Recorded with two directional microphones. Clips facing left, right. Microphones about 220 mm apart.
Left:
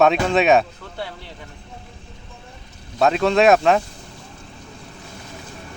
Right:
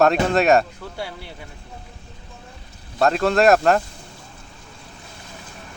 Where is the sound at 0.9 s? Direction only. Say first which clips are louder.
Left 1 dB; 10° right (ahead or behind).